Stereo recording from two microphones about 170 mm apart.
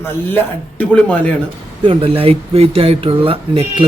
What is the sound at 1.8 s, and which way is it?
Speech, 30° right (ahead or behind).